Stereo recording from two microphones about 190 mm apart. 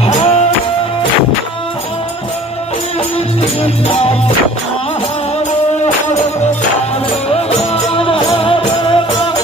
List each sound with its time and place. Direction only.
0.0 s music: 30° left (ahead or behind)
3.3 s music: 30° left (ahead or behind)
7.2 s music: 30° left (ahead or behind)